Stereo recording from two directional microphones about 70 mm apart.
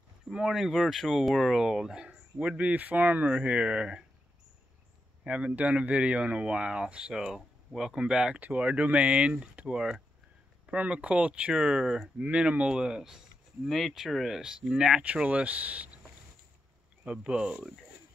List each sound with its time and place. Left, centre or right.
0.3 s speech: centre
5.2 s speech: centre
17.0 s speech: centre